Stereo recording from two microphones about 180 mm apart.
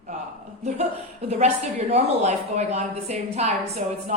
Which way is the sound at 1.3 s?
35° right (ahead or behind).